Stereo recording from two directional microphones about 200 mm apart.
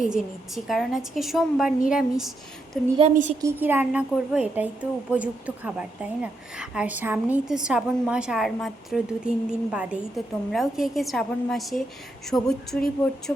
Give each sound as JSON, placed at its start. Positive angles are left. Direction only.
{"t": 0.0, "sound": "a woman's voice", "side_deg": 0}
{"t": 3.0, "sound": "a woman's voice", "side_deg": -35}
{"t": 3.4, "sound": "a woman's voice", "side_deg": -10}